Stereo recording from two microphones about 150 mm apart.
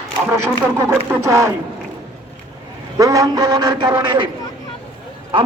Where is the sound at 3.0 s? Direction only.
25° right (ahead or behind).